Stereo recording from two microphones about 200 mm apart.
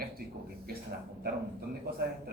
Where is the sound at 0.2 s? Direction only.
50° right (ahead or behind).